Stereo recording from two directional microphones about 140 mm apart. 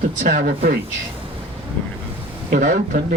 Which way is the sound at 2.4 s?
70° right (ahead or behind).